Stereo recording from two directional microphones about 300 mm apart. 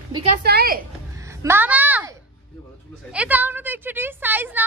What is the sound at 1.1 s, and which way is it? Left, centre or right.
A woman's voice, centre.